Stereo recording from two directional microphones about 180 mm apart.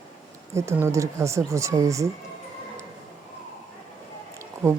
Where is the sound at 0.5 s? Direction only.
15° right (ahead or behind).